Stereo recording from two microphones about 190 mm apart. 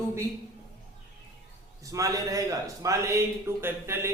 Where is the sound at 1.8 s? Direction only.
15° right (ahead or behind).